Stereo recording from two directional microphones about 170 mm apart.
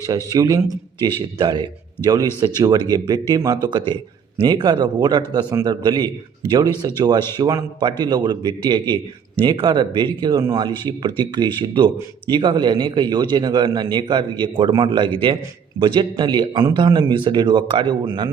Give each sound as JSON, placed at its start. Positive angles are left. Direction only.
{"t": 0.3, "sound": "a man's voice", "side_deg": -20}